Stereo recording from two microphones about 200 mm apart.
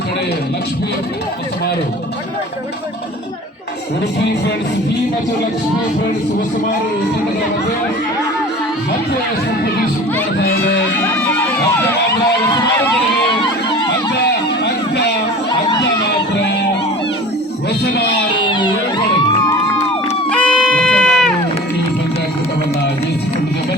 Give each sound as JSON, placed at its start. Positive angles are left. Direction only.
{"t": 10.9, "sound": "music", "side_deg": 10}
{"t": 14.6, "sound": "a sound", "side_deg": 55}
{"t": 15.8, "sound": "music", "side_deg": 60}
{"t": 18.4, "sound": "music", "side_deg": 25}
{"t": 20.3, "sound": "music", "side_deg": 5}